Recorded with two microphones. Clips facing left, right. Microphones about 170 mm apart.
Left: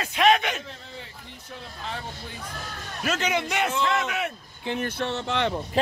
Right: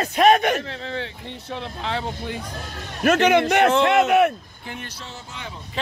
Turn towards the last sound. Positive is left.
turn(degrees=75)  # may be behind; listen again after turning